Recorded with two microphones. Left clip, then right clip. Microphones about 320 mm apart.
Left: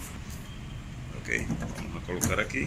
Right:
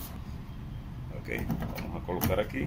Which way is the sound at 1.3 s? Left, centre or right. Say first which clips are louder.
Left 6 dB; centre.